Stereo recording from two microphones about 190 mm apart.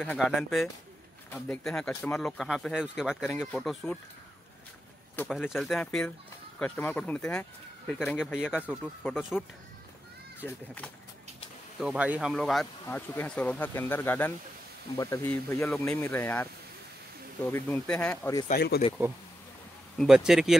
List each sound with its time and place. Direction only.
0.0 s speech: 5° left (ahead or behind)
2.1 s speech: centre (ahead or behind)
5.5 s speech: centre (ahead or behind)
10.4 s speech: 10° left (ahead or behind)
11.8 s speech: 5° right (ahead or behind); by 16.4 s 10° left (ahead or behind)
17.5 s speech: 10° left (ahead or behind)
18.5 s speech: 55° left (ahead or behind)
20.2 s speech: 5° right (ahead or behind)